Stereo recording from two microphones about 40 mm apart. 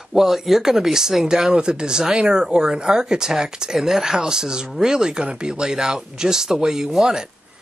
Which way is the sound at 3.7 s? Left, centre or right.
Centre.